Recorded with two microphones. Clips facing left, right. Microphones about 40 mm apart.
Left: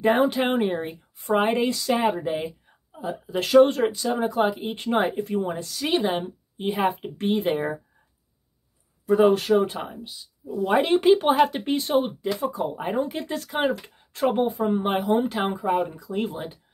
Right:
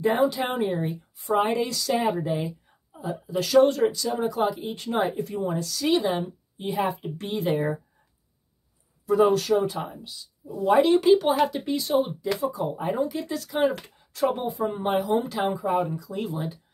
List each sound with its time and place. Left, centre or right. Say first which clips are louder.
0.0 s speech: left 2 dB; left
3.0 s speech: left 1 dB; left
9.0 s speech: left 2 dB; left
9.8 s speech: even; left